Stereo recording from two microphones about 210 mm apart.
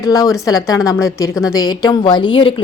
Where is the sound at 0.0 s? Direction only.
15° left (ahead or behind).